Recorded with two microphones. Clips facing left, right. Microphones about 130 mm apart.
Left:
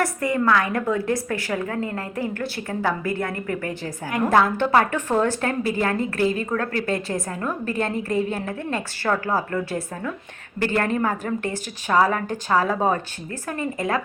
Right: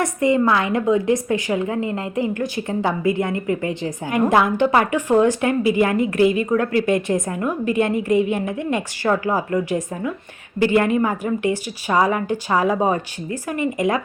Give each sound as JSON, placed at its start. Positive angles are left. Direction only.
{"t": 0.0, "sound": "a woman's voice", "side_deg": -20}